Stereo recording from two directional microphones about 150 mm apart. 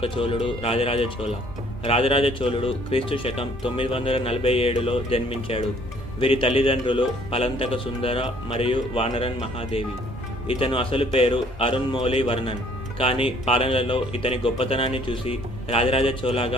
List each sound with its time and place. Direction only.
0.0 s speech: 35° left (ahead or behind)